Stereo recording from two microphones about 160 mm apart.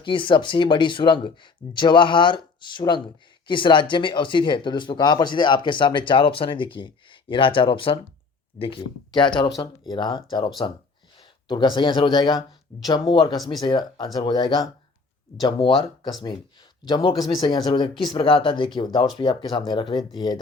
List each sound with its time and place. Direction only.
0.0 s speech: 30° left (ahead or behind)
13.3 s speech: centre (ahead or behind)
13.6 s speech: 25° left (ahead or behind)
16.9 s speech: 30° left (ahead or behind)